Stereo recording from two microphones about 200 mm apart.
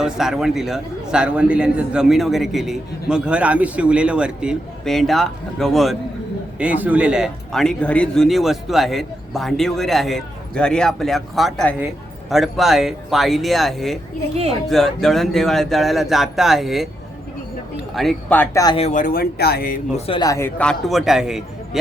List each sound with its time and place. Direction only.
0.0 s a man's voice: centre (ahead or behind); by 18.8 s 15° left (ahead or behind)
18.8 s speech: 40° left (ahead or behind)
20.1 s a man's voice: 20° left (ahead or behind); by 21.8 s 5° right (ahead or behind)